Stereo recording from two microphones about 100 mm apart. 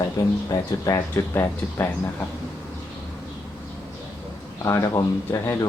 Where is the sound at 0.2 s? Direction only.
40° left (ahead or behind).